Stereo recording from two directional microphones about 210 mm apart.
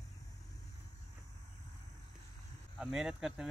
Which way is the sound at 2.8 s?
Centre (ahead or behind).